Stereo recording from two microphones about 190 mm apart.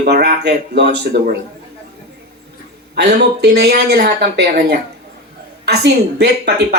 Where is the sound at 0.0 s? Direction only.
60° right (ahead or behind).